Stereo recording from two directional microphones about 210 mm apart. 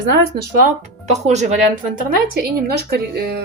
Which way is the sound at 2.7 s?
50° right (ahead or behind).